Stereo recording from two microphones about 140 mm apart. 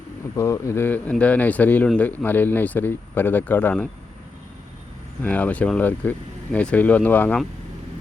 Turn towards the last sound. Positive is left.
turn(degrees=10)  # may be behind; listen again after turning